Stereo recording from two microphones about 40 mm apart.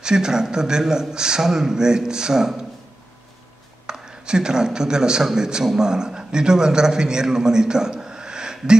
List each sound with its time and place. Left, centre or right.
0.0 s a man's voice: centre
3.8 s a man's voice: centre